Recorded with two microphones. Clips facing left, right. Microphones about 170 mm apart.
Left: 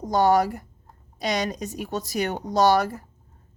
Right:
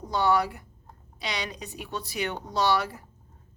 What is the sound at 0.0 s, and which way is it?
A woman's voice, 45° left (ahead or behind).